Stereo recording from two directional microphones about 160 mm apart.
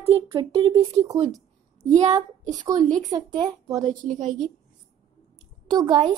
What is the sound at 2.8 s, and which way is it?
Speech, 5° left (ahead or behind).